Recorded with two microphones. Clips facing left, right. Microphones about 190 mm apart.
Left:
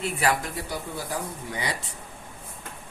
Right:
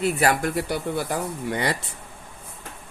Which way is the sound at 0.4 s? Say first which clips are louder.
Right 8 dB; 70° right (ahead or behind).